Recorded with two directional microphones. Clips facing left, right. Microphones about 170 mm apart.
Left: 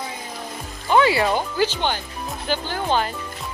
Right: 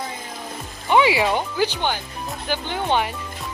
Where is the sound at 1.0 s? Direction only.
10° right (ahead or behind).